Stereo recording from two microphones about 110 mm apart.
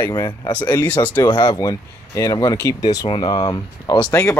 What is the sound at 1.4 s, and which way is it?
Speech, 35° left (ahead or behind).